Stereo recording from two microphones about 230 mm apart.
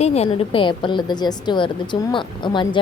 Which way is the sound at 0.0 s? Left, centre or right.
Left.